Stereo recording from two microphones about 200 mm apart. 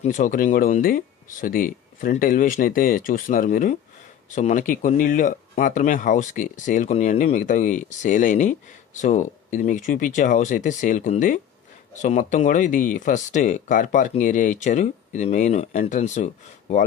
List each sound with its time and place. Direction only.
0.0 s speech: 40° left (ahead or behind)